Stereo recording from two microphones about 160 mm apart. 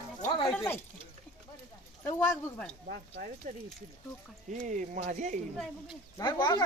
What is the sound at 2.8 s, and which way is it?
Speech, 70° right (ahead or behind).